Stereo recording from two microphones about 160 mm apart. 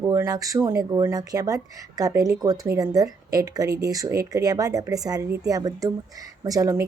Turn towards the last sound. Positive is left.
turn(degrees=-20)  # may be behind; listen again after turning